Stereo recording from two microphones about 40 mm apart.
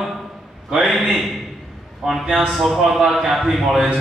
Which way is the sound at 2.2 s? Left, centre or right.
Centre.